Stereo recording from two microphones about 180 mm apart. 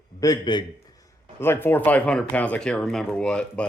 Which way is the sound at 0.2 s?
25° left (ahead or behind).